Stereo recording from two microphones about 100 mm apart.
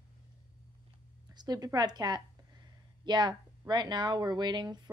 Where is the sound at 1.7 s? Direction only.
45° right (ahead or behind).